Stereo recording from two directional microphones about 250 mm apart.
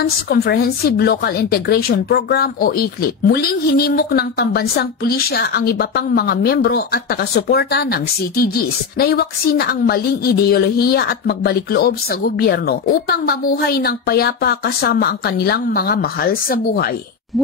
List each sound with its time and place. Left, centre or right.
0.0 s a woman's voice: left